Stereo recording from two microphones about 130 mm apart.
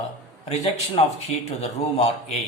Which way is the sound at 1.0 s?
55° left (ahead or behind).